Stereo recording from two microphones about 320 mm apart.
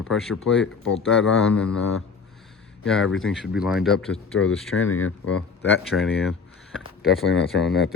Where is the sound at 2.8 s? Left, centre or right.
Centre.